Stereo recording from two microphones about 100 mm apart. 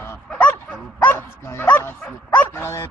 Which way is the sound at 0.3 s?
15° left (ahead or behind).